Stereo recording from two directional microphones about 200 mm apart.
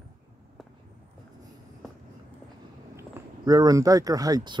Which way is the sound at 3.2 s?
10° right (ahead or behind).